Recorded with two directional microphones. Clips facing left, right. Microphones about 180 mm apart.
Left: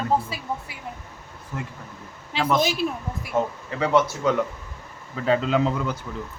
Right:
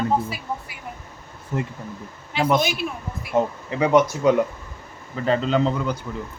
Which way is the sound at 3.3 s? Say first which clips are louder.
Right 4 dB; 15° right (ahead or behind).